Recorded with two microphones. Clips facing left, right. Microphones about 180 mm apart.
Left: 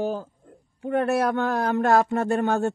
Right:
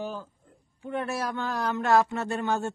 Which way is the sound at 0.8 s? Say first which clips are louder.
Left 8 dB; 60° left (ahead or behind).